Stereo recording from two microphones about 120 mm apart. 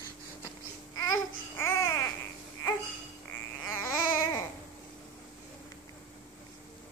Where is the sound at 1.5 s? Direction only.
20° left (ahead or behind).